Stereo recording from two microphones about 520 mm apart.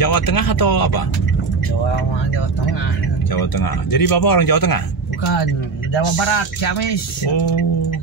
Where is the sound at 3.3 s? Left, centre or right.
Left.